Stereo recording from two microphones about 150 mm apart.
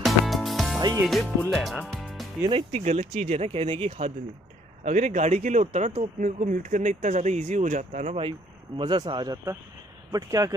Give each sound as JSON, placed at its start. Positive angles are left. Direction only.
{"t": 0.0, "sound": "music", "side_deg": 0}
{"t": 0.7, "sound": "music", "side_deg": -25}
{"t": 1.5, "sound": "speech", "side_deg": 0}
{"t": 2.0, "sound": "music", "side_deg": 0}
{"t": 2.7, "sound": "speech", "side_deg": -50}
{"t": 8.2, "sound": "speech", "side_deg": -35}